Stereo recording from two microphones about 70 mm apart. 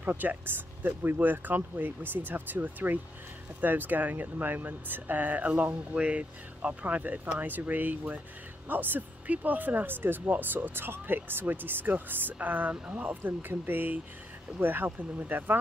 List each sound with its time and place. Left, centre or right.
0.0 s speech: right